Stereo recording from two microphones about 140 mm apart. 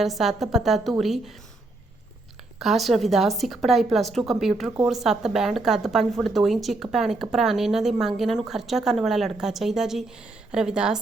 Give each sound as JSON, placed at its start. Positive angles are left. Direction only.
{"t": 0.0, "sound": "a woman's voice", "side_deg": 0}
{"t": 2.6, "sound": "a woman's voice", "side_deg": 0}